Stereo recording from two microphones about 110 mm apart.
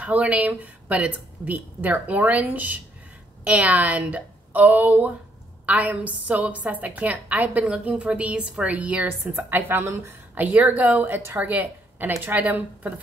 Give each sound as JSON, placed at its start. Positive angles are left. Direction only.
{"t": 0.0, "sound": "a woman's voice", "side_deg": -10}